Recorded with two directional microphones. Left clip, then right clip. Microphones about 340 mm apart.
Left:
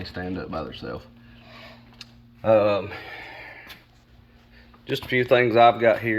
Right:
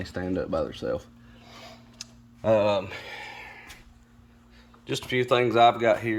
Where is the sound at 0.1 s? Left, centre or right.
Centre.